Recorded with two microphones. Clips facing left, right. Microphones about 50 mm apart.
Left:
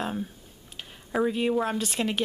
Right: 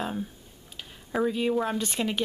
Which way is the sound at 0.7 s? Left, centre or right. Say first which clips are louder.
Left 1 dB; centre.